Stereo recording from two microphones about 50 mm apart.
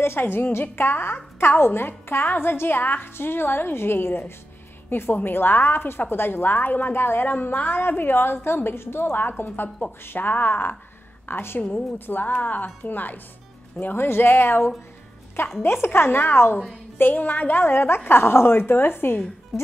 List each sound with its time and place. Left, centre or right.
0.0 s a woman's voice: left
1.1 s speech: left
1.6 s a woman's voice: left
7.2 s a woman's voice: left
17.0 s a woman's voice: left
19.5 s speech: centre